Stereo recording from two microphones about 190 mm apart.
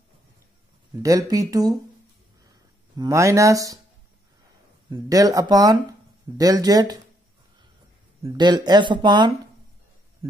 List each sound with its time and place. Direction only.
1.0 s speech: 20° right (ahead or behind)
3.0 s speech: 15° right (ahead or behind)
4.8 s speech: 20° right (ahead or behind)
8.2 s speech: 20° right (ahead or behind)